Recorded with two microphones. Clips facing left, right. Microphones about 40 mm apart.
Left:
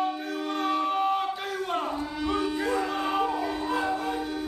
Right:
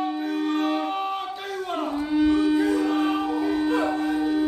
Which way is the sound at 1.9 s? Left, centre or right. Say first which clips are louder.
Right 9 dB; centre.